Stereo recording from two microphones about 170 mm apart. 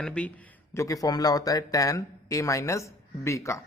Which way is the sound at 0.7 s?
20° left (ahead or behind).